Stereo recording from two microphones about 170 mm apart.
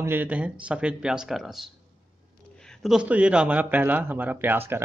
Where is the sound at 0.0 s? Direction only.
10° right (ahead or behind).